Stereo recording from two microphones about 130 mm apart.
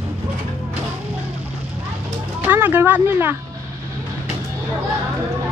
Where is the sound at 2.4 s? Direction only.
15° right (ahead or behind).